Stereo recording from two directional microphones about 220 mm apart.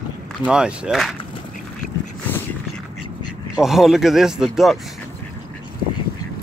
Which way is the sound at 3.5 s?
Centre (ahead or behind).